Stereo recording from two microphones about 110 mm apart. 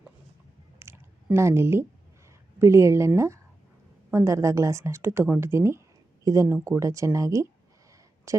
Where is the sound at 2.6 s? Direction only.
25° right (ahead or behind).